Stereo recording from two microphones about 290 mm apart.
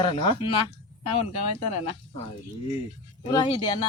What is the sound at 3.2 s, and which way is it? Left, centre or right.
Speech, centre.